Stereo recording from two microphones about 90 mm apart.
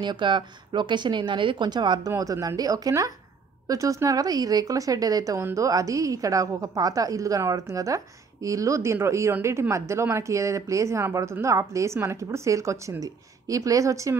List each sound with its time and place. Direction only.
0.0 s speech: 60° right (ahead or behind)
2.0 s a woman's voice: 40° right (ahead or behind)